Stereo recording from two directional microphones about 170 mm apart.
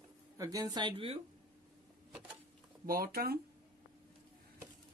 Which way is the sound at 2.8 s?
60° right (ahead or behind).